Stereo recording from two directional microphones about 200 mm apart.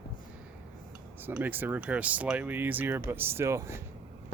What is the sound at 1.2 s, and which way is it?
Speech, 10° right (ahead or behind).